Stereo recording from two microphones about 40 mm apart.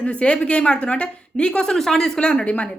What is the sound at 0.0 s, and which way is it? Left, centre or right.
A woman's voice, left.